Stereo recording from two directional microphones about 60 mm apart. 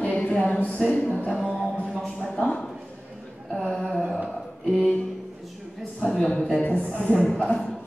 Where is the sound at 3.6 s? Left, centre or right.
Centre.